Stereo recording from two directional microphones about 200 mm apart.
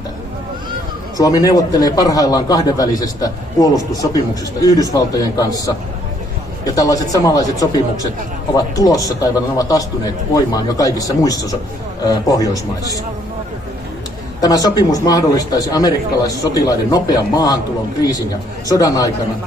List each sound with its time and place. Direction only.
1.1 s a man's voice: 20° left (ahead or behind)
6.6 s a man's voice: 15° left (ahead or behind)
14.4 s a man's voice: 20° left (ahead or behind)
18.7 s a man's voice: 15° left (ahead or behind)